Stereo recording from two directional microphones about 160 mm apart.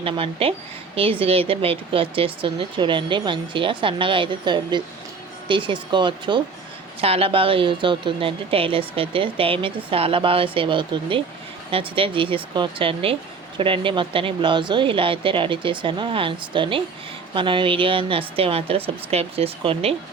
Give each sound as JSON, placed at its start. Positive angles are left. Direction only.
{"t": 0.0, "sound": "speech", "side_deg": -35}